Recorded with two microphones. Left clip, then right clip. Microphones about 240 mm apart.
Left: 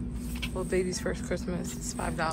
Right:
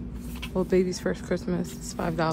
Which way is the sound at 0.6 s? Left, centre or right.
Right.